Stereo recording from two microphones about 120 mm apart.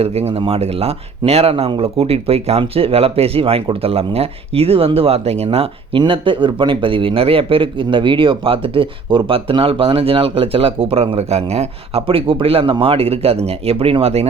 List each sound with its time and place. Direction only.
0.0 s speech: 60° right (ahead or behind)
6.0 s a man's voice: 45° right (ahead or behind)